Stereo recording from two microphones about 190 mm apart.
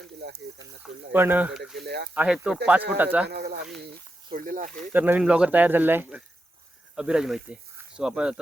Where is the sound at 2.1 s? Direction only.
5° right (ahead or behind).